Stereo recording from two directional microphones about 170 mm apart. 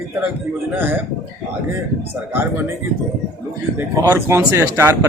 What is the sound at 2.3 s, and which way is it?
Speech, 10° right (ahead or behind).